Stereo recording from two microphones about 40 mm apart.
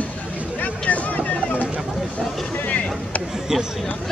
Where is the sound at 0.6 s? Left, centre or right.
Left.